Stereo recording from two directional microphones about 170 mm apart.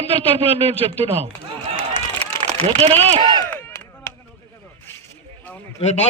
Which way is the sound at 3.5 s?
15° left (ahead or behind).